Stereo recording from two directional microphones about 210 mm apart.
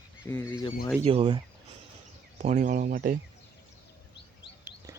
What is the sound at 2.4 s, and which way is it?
Speech, 35° right (ahead or behind).